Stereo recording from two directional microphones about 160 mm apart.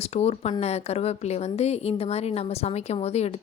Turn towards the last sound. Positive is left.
turn(degrees=40)  # may be behind; listen again after turning